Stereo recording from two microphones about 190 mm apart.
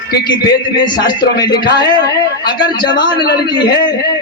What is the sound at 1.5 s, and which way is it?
Speech, 60° left (ahead or behind).